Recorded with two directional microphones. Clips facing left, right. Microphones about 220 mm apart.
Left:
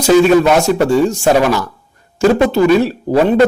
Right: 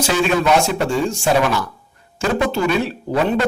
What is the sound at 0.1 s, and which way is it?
Speech, 40° left (ahead or behind).